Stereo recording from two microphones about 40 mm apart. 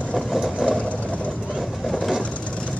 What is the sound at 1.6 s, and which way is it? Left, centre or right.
Vehicle, centre.